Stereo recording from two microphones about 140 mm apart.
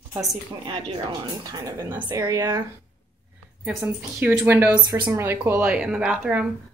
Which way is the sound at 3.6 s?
10° right (ahead or behind).